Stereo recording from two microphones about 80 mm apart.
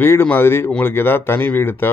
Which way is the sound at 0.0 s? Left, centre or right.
Left.